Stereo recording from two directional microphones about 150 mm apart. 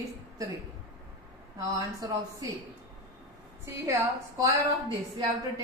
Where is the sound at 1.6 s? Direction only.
25° right (ahead or behind).